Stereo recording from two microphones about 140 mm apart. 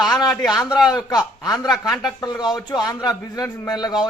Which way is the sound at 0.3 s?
Centre (ahead or behind).